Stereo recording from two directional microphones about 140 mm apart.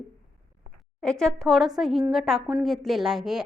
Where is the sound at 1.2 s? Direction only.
Centre (ahead or behind).